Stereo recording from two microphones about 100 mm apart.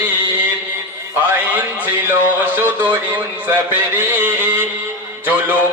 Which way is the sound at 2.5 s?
15° right (ahead or behind).